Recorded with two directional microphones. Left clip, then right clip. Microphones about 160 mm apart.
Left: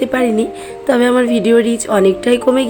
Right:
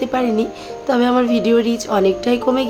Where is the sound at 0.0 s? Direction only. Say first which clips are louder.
Left 3 dB; 20° left (ahead or behind).